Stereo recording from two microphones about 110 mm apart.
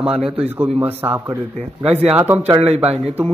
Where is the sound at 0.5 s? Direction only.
20° right (ahead or behind).